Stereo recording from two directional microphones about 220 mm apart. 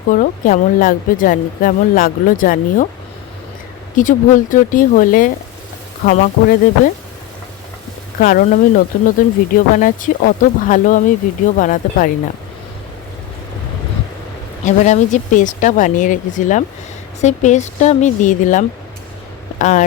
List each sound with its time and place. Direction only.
0.1 s speech: 40° left (ahead or behind)
3.9 s speech: 35° left (ahead or behind)
8.2 s speech: 35° left (ahead or behind)
14.6 s speech: 35° left (ahead or behind)